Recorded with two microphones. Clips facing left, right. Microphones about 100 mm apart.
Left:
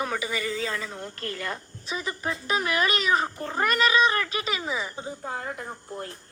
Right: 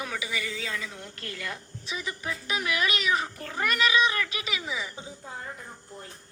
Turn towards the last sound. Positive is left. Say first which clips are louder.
# left 8 dB
turn(degrees=75)  # may be behind; listen again after turning